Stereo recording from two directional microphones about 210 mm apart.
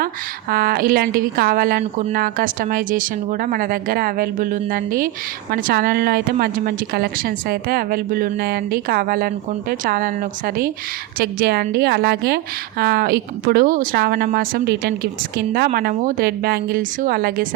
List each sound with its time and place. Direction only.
0.5 s speech: 45° right (ahead or behind)
1.8 s speech: 30° right (ahead or behind)
2.1 s speech: 40° right (ahead or behind)